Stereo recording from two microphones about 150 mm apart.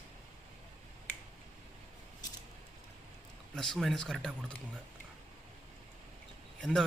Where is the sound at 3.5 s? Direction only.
Centre (ahead or behind).